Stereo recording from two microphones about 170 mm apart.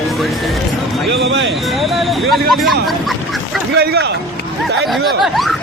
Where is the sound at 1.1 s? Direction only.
90° right.